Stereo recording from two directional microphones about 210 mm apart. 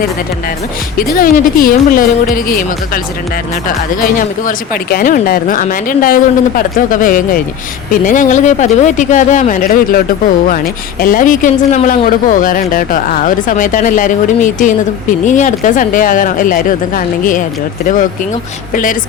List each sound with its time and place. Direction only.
0.9 s speech: 40° left (ahead or behind)
11.0 s speech: 40° left (ahead or behind)
18.7 s speech: 40° left (ahead or behind)